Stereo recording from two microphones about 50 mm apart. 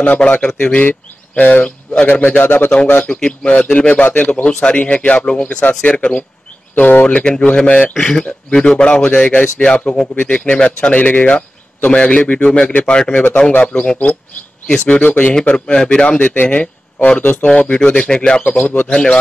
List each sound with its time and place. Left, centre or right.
0.0 s speech: left
3.0 s a man's voice: centre
6.7 s speech: left
7.1 s speech: centre
8.0 s speech: centre
15.5 s a man's voice: centre
16.2 s a man's voice: left